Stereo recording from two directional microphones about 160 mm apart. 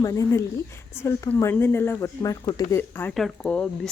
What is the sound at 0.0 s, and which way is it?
Speech, 20° left (ahead or behind).